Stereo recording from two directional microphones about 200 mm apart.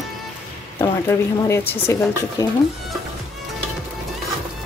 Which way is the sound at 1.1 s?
15° left (ahead or behind).